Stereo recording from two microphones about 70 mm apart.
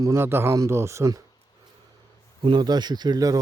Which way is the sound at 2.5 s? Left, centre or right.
Right.